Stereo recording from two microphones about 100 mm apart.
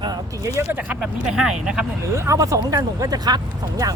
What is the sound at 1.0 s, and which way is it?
Speech, 5° right (ahead or behind).